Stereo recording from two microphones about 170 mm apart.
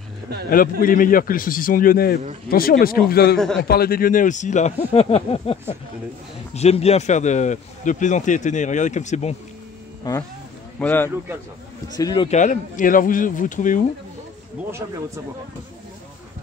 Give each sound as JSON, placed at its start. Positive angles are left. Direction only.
{"t": 0.5, "sound": "a man's voice", "side_deg": 55}
{"t": 3.3, "sound": "a man's voice", "side_deg": 5}
{"t": 3.6, "sound": "speech", "side_deg": 65}
{"t": 10.1, "sound": "a man's voice", "side_deg": 25}
{"t": 10.8, "sound": "speech", "side_deg": 10}
{"t": 12.0, "sound": "a man's voice", "side_deg": 25}
{"t": 12.3, "sound": "speech", "side_deg": 50}